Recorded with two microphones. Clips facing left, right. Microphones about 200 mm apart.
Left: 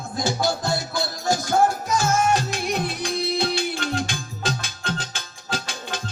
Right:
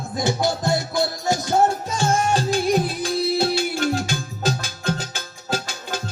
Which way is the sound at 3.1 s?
Centre (ahead or behind).